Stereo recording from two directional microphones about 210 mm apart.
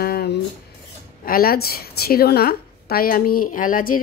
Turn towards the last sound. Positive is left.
turn(degrees=40)  # may be behind; listen again after turning